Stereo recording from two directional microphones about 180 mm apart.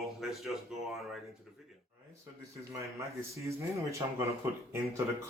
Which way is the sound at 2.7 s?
15° right (ahead or behind).